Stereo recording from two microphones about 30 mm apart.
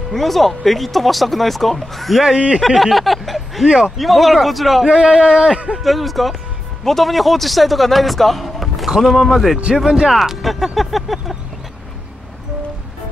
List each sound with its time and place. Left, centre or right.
0.1 s a man's voice: centre
2.3 s speech: right
2.6 s a sound: centre
3.8 s a man's voice: centre
5.0 s speech: centre
5.9 s a man's voice: centre
9.8 s speech: centre
10.5 s vehicle: centre